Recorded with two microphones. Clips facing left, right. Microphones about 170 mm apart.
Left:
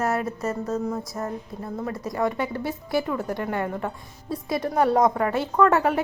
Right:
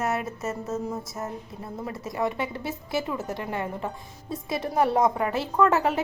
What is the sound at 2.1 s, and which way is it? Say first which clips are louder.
Speech: left 2 dB; 25° right (ahead or behind).